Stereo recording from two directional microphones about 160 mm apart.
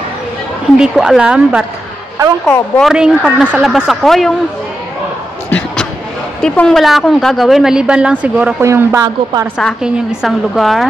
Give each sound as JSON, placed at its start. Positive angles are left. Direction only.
{"t": 0.7, "sound": "a woman's voice", "side_deg": -5}
{"t": 2.4, "sound": "a woman's voice", "side_deg": 5}
{"t": 2.9, "sound": "a woman's voice", "side_deg": -5}
{"t": 6.4, "sound": "a woman's voice", "side_deg": 5}
{"t": 9.6, "sound": "a woman's voice", "side_deg": 0}